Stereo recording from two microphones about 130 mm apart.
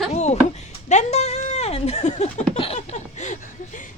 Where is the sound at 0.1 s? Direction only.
60° left (ahead or behind).